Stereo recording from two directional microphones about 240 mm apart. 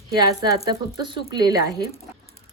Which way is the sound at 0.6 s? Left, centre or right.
Centre.